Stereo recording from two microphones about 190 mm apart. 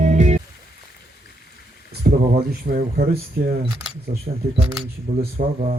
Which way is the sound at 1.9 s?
55° right (ahead or behind).